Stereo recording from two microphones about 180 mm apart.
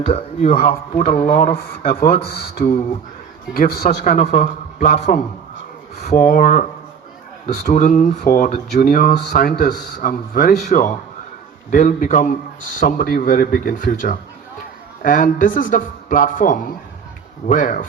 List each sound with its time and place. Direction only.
0.0 s speech: 35° left (ahead or behind)
1.8 s a man's voice: 50° left (ahead or behind)
10.7 s a man's voice: 45° left (ahead or behind)